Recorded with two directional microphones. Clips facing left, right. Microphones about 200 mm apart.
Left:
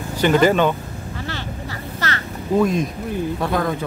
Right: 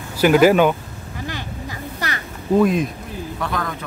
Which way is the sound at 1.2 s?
15° right (ahead or behind).